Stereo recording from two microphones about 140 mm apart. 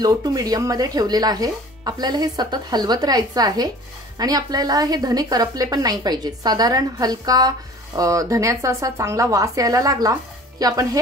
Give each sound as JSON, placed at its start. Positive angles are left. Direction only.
{"t": 0.0, "sound": "a woman's voice", "side_deg": -25}